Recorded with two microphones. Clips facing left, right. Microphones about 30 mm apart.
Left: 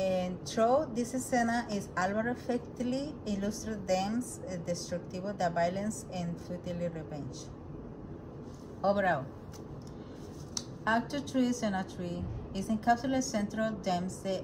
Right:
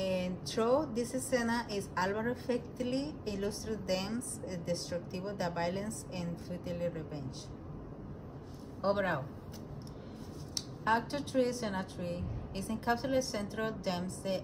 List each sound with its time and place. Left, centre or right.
0.0 s a woman's voice: right
8.8 s a man's voice: centre
10.9 s a woman's voice: right
14.2 s a man's voice: centre